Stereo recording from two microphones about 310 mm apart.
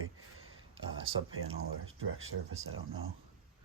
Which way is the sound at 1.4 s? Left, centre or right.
Right.